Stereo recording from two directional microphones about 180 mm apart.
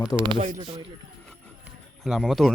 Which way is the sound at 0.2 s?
25° right (ahead or behind).